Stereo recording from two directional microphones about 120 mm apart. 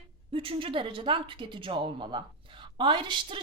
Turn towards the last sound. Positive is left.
turn(degrees=-45)  # may be behind; listen again after turning